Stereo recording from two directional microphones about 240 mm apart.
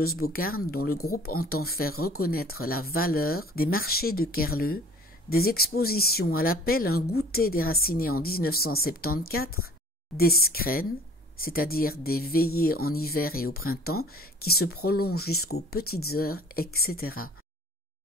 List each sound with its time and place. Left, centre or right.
0.2 s speech: left